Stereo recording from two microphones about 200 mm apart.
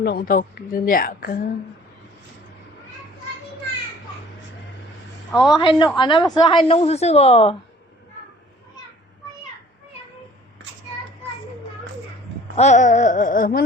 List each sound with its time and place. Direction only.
0.0 s a woman's voice: 50° left (ahead or behind)
5.3 s a woman's voice: centre (ahead or behind)
5.5 s a woman's voice: 25° left (ahead or behind)
12.5 s a sound: 35° left (ahead or behind)